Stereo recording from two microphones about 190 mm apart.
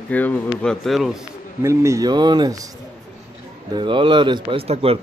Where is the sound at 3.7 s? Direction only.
25° right (ahead or behind).